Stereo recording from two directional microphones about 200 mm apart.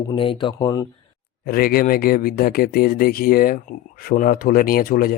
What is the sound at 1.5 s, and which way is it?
Speech, 50° left (ahead or behind).